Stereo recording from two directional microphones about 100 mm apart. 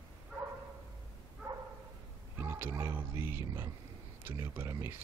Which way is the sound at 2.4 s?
25° right (ahead or behind).